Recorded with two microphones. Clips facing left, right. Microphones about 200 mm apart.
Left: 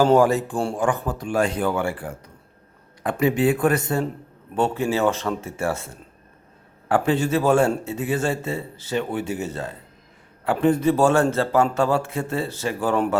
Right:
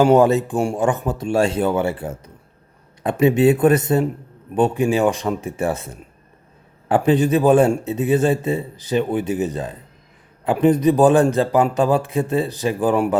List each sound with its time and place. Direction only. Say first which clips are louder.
0.0 s a man's voice: right 3 dB; 20° right (ahead or behind)